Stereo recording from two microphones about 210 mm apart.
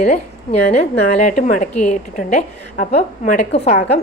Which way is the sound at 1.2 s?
40° left (ahead or behind).